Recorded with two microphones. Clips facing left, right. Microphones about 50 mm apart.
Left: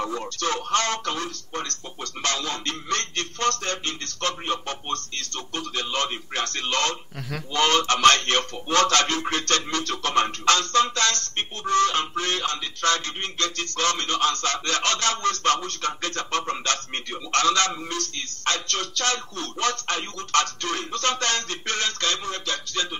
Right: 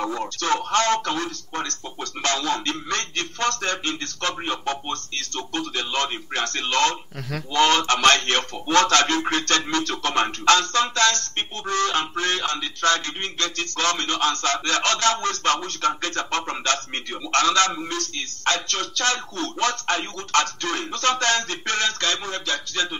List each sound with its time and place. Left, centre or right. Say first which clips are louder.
0.4 s music: right 3 dB; right
3.6 s music: right 3 dB; right
7.2 s speech: right 2 dB; centre
7.5 s music: right 2 dB; right